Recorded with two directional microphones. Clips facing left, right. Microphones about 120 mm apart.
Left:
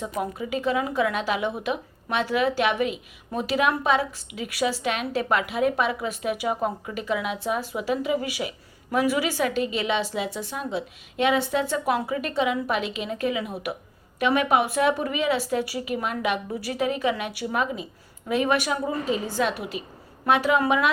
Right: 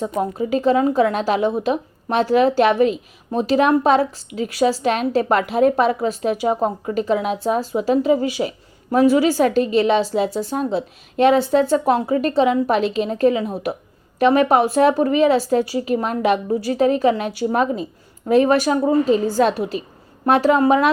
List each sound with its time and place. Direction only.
0.2 s a woman's voice: 35° right (ahead or behind)